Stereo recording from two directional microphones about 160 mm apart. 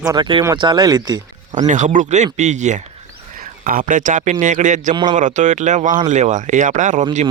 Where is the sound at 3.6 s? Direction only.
60° right (ahead or behind).